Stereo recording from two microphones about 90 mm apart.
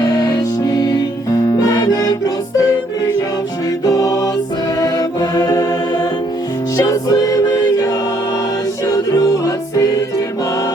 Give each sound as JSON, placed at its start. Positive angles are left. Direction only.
{"t": 0.0, "sound": "music", "side_deg": 50}
{"t": 3.8, "sound": "music", "side_deg": 40}
{"t": 9.1, "sound": "music", "side_deg": 40}